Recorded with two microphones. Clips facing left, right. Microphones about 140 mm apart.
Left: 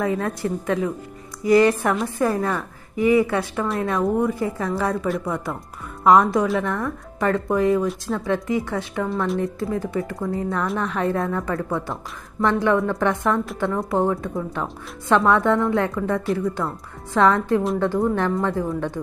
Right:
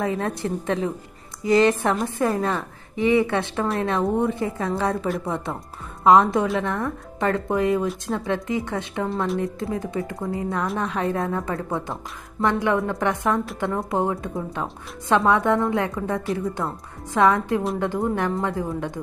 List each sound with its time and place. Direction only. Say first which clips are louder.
0.0 s a woman's voice: left 2 dB; 25° right (ahead or behind)